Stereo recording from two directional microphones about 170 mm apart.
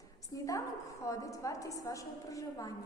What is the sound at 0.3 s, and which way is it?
A woman's voice, 20° left (ahead or behind).